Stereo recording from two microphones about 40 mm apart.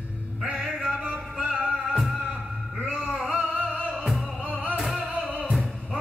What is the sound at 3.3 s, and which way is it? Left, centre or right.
Music, right.